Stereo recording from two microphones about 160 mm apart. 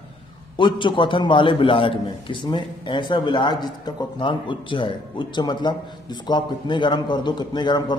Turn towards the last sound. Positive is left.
turn(degrees=30)  # may be behind; listen again after turning